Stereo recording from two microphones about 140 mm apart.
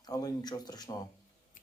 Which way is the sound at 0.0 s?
30° left (ahead or behind).